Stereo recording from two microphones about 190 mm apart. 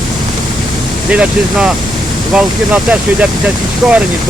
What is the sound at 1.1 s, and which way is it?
Speech, 5° right (ahead or behind).